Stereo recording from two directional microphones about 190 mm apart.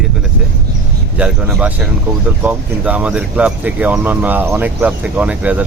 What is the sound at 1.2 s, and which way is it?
Speech, 5° right (ahead or behind).